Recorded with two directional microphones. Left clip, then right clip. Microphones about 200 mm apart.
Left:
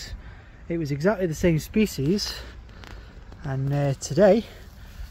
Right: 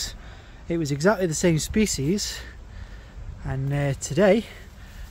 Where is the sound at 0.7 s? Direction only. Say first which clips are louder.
Right 2 dB; 5° right (ahead or behind); by 2.4 s 20° left (ahead or behind).